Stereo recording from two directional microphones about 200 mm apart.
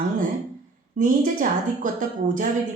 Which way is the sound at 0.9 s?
40° right (ahead or behind).